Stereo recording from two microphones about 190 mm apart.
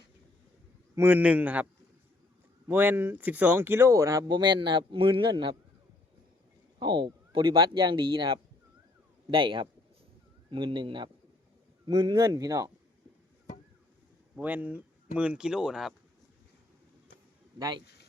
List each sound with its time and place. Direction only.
0.9 s speech: 10° right (ahead or behind)
2.6 s speech: 10° right (ahead or behind)
6.7 s speech: 25° right (ahead or behind)
14.3 s speech: 10° right (ahead or behind)
17.6 s speech: 20° right (ahead or behind)